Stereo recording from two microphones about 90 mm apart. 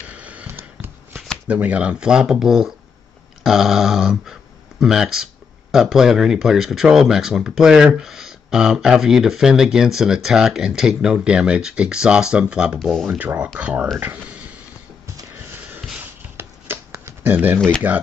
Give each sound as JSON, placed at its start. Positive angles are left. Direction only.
{"t": 0.1, "sound": "a sound", "side_deg": -15}
{"t": 1.5, "sound": "speech", "side_deg": -15}
{"t": 12.7, "sound": "speech", "side_deg": 5}
{"t": 13.0, "sound": "speech", "side_deg": -15}
{"t": 16.0, "sound": "a sound", "side_deg": -20}
{"t": 16.9, "sound": "shuffling cards", "side_deg": -30}
{"t": 17.9, "sound": "speech", "side_deg": -15}